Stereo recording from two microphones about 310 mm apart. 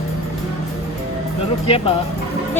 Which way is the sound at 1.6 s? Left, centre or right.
Centre.